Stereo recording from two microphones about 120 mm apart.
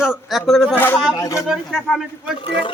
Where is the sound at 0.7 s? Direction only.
15° left (ahead or behind).